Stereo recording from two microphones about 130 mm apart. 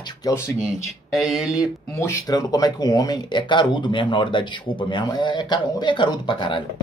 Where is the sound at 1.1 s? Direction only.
Centre (ahead or behind).